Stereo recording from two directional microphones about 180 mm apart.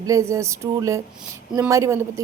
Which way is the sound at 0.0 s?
15° right (ahead or behind).